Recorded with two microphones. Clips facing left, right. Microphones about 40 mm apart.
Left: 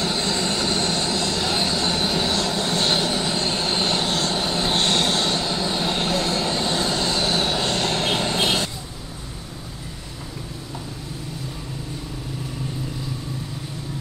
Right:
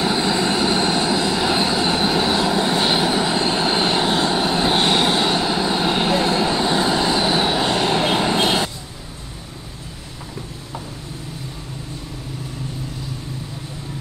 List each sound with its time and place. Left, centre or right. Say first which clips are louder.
0.0 s vehicle: right 5 dB; centre